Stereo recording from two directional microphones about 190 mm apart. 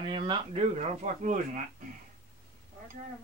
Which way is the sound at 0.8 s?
40° right (ahead or behind).